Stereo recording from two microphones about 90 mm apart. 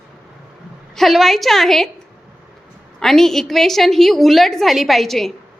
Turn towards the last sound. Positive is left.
turn(degrees=5)  # may be behind; listen again after turning